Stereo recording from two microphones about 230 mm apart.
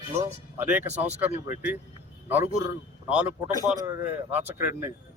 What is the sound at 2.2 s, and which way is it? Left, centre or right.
A man's voice, centre.